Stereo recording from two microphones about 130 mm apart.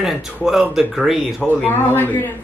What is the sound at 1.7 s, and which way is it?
Speech, 15° left (ahead or behind).